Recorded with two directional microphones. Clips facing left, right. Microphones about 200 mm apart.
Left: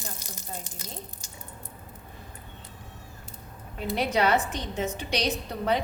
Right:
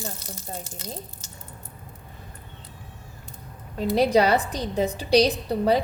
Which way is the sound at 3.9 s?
35° right (ahead or behind).